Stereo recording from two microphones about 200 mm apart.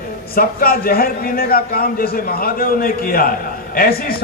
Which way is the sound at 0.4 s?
45° left (ahead or behind).